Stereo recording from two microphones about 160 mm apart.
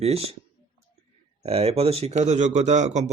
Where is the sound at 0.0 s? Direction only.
40° right (ahead or behind).